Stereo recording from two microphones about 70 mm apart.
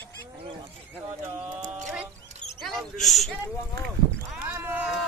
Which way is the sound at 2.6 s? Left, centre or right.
Centre.